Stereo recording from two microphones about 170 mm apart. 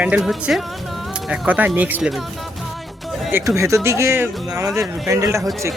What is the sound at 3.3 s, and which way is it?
Speech, 15° right (ahead or behind).